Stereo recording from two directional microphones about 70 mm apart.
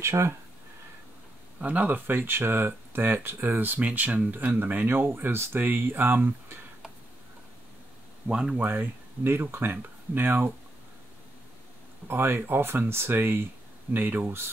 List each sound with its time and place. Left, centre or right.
0.0 s speech: right
1.6 s speech: right
8.3 s speech: centre
8.5 s speech: right
12.1 s speech: right